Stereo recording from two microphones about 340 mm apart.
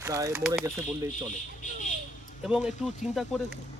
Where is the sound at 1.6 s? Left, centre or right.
Left.